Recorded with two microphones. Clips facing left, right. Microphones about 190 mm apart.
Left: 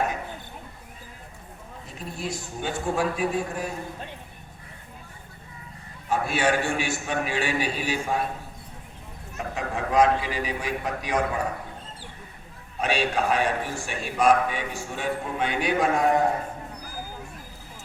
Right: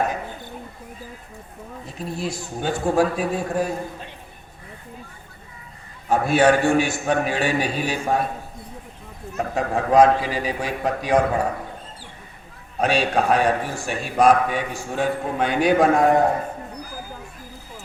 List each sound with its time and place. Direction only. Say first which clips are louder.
2.0 s a man's voice: right 5 dB; 35° right (ahead or behind)
6.1 s a man's voice: right 7 dB; 40° right (ahead or behind)
9.6 s a man's voice: right 6 dB; 35° right (ahead or behind)
12.8 s a man's voice: right 5 dB; 40° right (ahead or behind)